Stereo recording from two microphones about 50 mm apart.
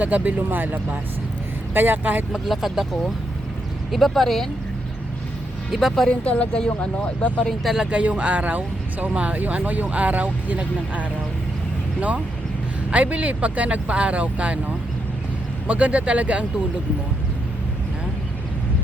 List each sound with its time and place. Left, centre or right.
0.0 s speech: right
2.3 s speech: centre
5.9 s speech: centre
6.2 s speech: left
7.6 s speech: centre
7.9 s speech: right
15.6 s speech: right